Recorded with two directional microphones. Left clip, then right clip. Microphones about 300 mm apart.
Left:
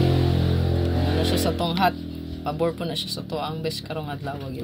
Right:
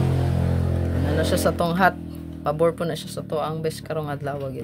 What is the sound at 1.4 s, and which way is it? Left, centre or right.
Speech, right.